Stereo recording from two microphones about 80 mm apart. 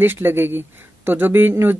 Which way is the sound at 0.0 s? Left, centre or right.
Right.